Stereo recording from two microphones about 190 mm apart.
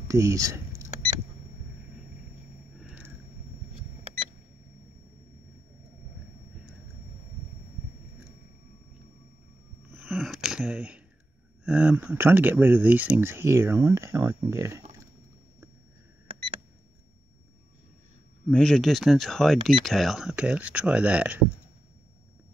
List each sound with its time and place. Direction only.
0.1 s speech: 15° right (ahead or behind)
2.8 s vehicle: 5° right (ahead or behind)
9.9 s a sound: centre (ahead or behind)
11.6 s speech: 5° right (ahead or behind)
18.5 s speech: 5° left (ahead or behind)